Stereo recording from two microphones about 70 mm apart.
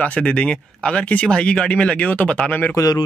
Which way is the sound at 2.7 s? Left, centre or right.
Left.